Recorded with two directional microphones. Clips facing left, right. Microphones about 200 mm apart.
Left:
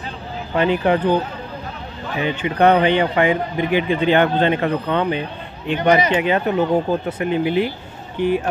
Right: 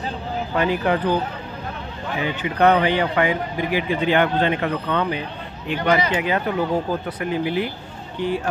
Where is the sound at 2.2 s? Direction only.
30° left (ahead or behind).